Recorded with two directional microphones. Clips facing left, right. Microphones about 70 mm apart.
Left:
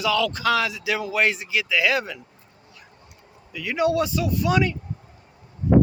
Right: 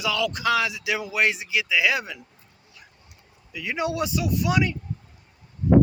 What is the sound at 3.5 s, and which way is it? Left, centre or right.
Speech, centre.